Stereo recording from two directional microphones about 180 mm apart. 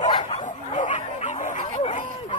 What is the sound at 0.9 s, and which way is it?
Bow-wow, 40° left (ahead or behind).